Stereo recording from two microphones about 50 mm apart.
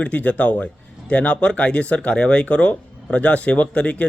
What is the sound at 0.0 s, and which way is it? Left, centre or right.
A man's voice, left.